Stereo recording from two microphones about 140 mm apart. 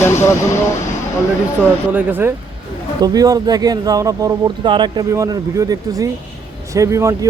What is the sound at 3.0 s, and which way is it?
Speech, 25° right (ahead or behind).